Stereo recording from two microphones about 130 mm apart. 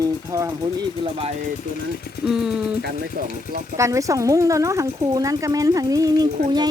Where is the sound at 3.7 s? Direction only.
25° right (ahead or behind).